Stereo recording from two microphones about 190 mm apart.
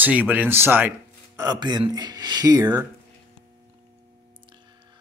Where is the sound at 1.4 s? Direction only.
20° right (ahead or behind).